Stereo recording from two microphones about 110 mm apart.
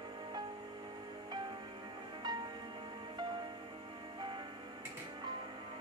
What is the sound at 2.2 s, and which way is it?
Music, 40° right (ahead or behind).